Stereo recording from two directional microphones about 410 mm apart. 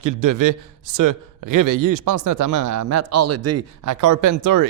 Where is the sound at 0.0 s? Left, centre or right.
Right.